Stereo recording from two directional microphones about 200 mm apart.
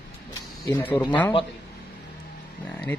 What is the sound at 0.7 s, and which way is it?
Speech, 15° left (ahead or behind).